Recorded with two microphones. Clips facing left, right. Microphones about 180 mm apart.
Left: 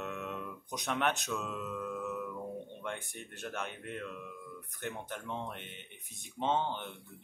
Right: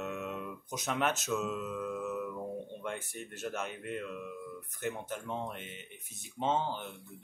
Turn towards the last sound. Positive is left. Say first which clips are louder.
# even
turn(degrees=-5)  # may be behind; listen again after turning